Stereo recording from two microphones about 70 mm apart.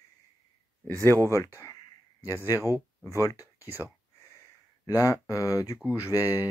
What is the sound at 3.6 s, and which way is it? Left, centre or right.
Speech, right.